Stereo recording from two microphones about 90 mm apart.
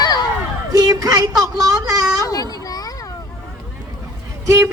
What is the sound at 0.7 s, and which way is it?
A woman's voice, 45° right (ahead or behind).